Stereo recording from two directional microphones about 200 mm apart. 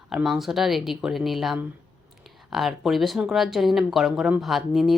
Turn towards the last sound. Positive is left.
turn(degrees=0)  # may be behind; listen again after turning